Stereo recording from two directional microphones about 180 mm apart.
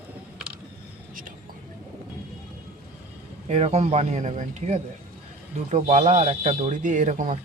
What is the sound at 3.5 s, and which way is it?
A man's voice, 40° right (ahead or behind).